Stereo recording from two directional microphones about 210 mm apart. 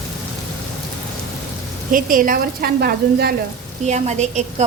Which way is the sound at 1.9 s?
40° right (ahead or behind).